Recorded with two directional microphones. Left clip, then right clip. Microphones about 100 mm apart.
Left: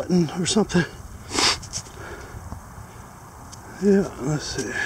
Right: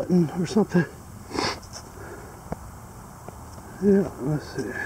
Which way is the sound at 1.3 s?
20° left (ahead or behind).